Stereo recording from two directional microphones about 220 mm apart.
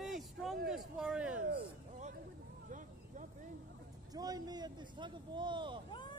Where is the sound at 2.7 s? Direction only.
35° right (ahead or behind).